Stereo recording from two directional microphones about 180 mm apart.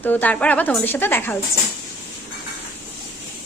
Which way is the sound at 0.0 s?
10° left (ahead or behind).